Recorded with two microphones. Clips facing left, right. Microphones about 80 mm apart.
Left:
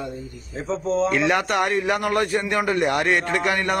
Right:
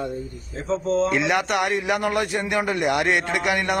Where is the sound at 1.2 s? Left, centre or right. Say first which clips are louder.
Left 1 dB; centre.